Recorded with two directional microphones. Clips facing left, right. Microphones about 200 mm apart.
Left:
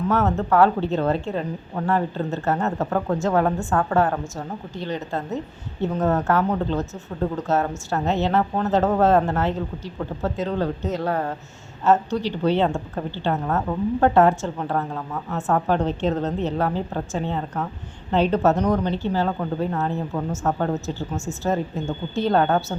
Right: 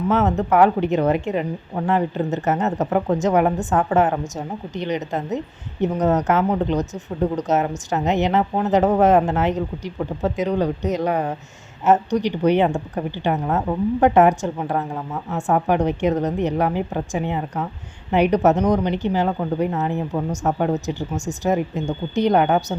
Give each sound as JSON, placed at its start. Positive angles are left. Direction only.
{"t": 0.1, "sound": "speech", "side_deg": -15}